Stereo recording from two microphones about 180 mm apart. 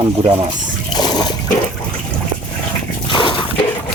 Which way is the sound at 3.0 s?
25° left (ahead or behind).